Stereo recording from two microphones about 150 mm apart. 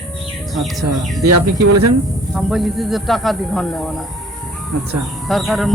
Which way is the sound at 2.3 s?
Centre (ahead or behind).